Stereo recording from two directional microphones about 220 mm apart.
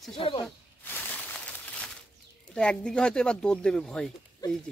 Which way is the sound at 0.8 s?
5° left (ahead or behind).